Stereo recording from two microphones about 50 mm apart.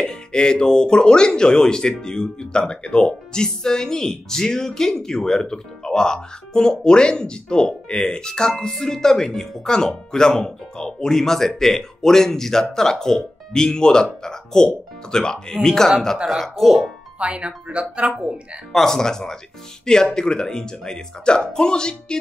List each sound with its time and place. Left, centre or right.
0.0 s speech: centre
16.4 s speech: centre
17.2 s speech: right
18.7 s speech: centre